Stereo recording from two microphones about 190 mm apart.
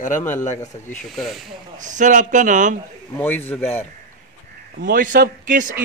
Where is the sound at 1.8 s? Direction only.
40° right (ahead or behind).